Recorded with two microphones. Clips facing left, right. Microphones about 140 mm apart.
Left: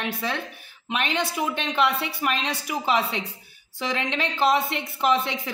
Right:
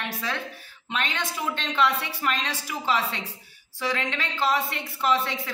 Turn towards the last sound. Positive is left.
turn(degrees=15)  # may be behind; listen again after turning